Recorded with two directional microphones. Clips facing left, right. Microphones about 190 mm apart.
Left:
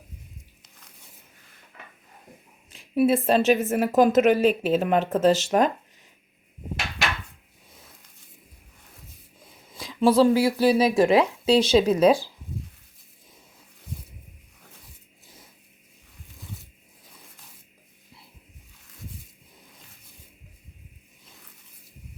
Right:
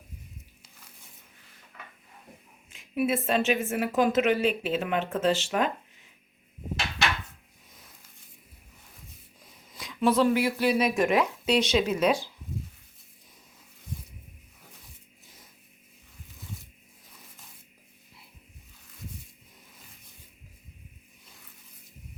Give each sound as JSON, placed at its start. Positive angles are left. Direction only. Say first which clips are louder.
{"t": 2.6, "sound": "a woman's voice", "louder": "left 6 dB", "side_deg": 35}
{"t": 9.7, "sound": "a woman's voice", "louder": "left 5 dB", "side_deg": 30}